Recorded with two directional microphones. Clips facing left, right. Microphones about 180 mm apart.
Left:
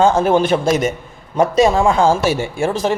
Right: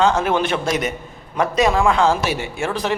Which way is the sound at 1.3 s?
30° left (ahead or behind).